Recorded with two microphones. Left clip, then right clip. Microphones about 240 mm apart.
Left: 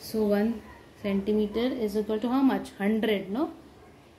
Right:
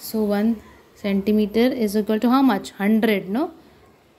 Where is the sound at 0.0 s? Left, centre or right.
Right.